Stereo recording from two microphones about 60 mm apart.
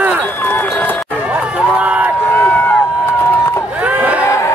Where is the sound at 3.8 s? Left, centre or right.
Right.